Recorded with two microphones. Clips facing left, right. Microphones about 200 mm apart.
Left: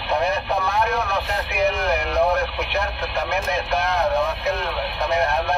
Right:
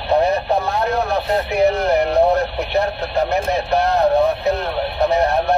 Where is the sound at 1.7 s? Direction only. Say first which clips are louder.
Right 6 dB; 35° right (ahead or behind).